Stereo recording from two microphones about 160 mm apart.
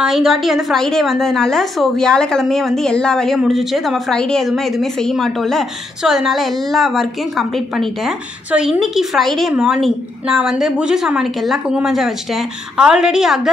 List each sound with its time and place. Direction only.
0.0 s a woman's voice: centre (ahead or behind)